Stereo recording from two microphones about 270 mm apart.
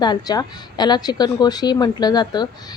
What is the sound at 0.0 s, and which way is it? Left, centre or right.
A woman's voice, centre.